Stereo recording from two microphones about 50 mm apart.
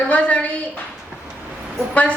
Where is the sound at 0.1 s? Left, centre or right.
Left.